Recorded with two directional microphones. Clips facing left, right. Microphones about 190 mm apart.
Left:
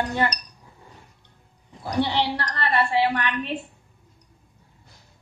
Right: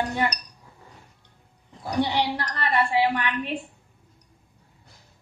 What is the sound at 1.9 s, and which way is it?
A woman's voice, 10° right (ahead or behind).